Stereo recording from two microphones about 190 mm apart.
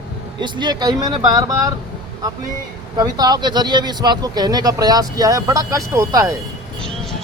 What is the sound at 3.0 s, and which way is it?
Speech, 20° right (ahead or behind).